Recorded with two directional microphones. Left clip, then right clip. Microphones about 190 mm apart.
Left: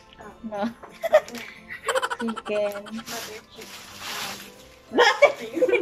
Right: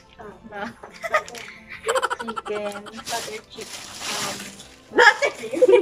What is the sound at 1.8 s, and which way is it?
Speech, centre (ahead or behind).